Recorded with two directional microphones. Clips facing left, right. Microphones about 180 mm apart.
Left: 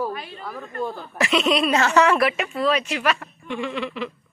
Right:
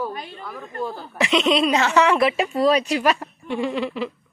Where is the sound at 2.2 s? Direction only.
30° right (ahead or behind).